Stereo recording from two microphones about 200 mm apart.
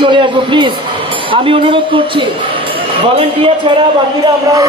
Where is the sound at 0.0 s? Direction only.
25° right (ahead or behind).